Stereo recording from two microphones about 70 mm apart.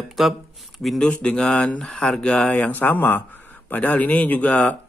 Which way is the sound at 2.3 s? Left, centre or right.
Centre.